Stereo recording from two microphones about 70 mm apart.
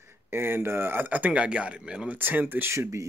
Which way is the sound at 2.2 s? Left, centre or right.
Right.